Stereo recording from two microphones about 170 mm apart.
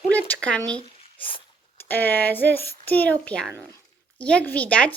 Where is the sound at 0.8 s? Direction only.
30° left (ahead or behind).